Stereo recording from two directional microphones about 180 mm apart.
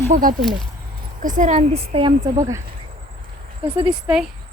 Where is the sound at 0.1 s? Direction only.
50° right (ahead or behind); by 2.4 s 25° right (ahead or behind).